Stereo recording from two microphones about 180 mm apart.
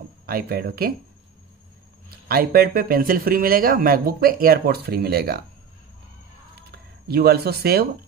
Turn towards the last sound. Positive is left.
turn(degrees=-60)  # may be behind; listen again after turning